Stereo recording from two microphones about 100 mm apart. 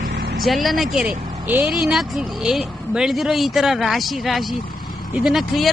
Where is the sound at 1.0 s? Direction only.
15° right (ahead or behind).